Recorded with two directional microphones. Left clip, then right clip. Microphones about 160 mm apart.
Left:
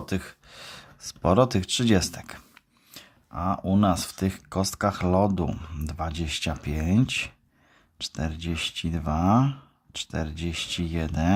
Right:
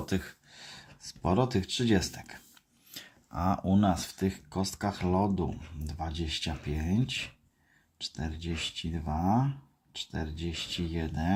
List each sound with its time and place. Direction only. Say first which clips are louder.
0.0 s speech: left 2 dB; 25° left (ahead or behind); by 2.6 s 40° left (ahead or behind)
2.9 s a sound: left 2 dB; 10° left (ahead or behind)
3.7 s speech: left 5 dB; 30° left (ahead or behind)